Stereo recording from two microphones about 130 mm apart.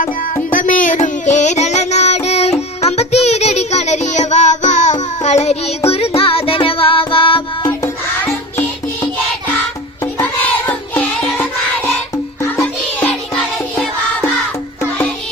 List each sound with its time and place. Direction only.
0.5 s child singing: 90° left; by 7.4 s 40° left (ahead or behind)
7.6 s music: 25° left (ahead or behind)